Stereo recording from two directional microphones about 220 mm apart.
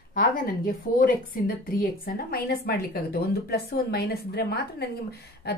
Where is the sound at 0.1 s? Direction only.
40° left (ahead or behind).